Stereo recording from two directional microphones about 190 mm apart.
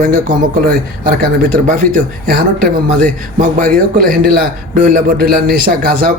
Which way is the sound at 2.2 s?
50° right (ahead or behind).